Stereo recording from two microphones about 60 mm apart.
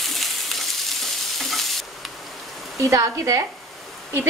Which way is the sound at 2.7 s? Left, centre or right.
Right.